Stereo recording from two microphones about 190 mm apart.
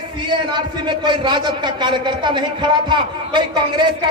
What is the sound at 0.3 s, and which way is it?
A man's voice, 25° right (ahead or behind).